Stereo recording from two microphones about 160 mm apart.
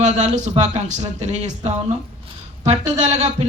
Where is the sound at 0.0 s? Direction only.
45° right (ahead or behind).